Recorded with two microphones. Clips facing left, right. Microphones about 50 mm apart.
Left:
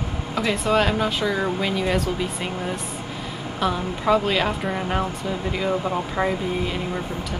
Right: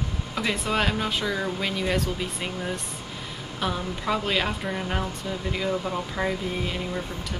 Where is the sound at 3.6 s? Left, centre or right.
Centre.